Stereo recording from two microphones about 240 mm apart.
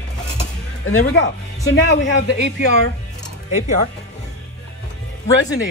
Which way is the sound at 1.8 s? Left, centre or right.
Left.